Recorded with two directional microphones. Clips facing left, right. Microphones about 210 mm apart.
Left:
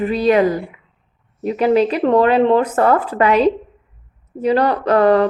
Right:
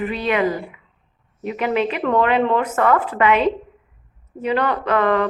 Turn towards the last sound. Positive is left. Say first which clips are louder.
# left 5 dB
turn(degrees=35)  # may be behind; listen again after turning